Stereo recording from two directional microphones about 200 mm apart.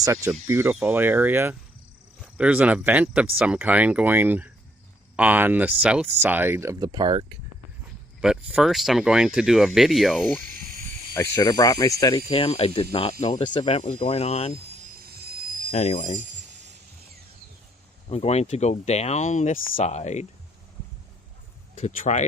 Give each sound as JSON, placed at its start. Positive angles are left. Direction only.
{"t": 0.0, "sound": "speech", "side_deg": -15}
{"t": 8.2, "sound": "speech", "side_deg": -5}
{"t": 10.6, "sound": "a sound", "side_deg": -45}
{"t": 11.1, "sound": "speech", "side_deg": 15}
{"t": 14.9, "sound": "a sound", "side_deg": -50}
{"t": 15.7, "sound": "speech", "side_deg": 35}
{"t": 18.1, "sound": "speech", "side_deg": 30}
{"t": 21.8, "sound": "speech", "side_deg": 35}